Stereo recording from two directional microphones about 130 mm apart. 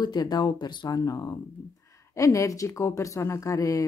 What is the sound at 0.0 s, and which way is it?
Speech, 30° left (ahead or behind).